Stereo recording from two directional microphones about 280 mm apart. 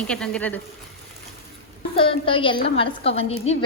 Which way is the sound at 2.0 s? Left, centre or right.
Centre.